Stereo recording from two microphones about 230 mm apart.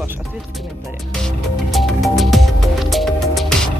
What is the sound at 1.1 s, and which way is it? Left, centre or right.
Music, centre.